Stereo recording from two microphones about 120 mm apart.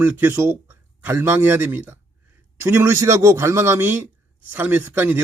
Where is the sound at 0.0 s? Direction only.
15° right (ahead or behind).